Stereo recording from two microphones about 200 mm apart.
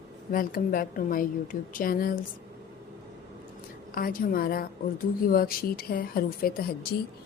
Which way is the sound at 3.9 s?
45° left (ahead or behind).